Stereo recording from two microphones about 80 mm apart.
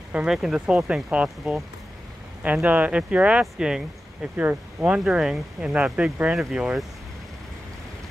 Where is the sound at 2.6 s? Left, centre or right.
Centre.